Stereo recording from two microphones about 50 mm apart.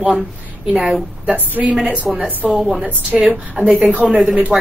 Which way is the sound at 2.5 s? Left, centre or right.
Centre.